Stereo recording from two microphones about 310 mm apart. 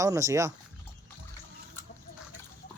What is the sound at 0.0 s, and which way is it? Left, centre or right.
Speech, centre.